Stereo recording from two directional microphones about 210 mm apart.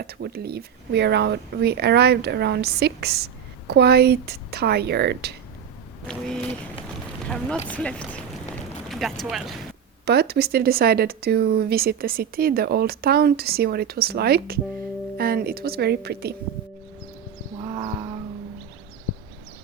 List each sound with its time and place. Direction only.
0.0 s speech: 50° right (ahead or behind)
6.1 s a sound: 5° left (ahead or behind)
7.3 s speech: 5° left (ahead or behind)
10.1 s speech: 50° right (ahead or behind)
17.6 s wild animals: 20° right (ahead or behind)